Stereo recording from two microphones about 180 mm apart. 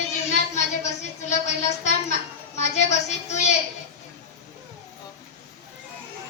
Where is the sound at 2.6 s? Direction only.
40° left (ahead or behind).